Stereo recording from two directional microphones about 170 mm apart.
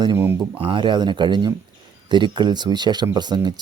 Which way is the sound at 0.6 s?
30° right (ahead or behind).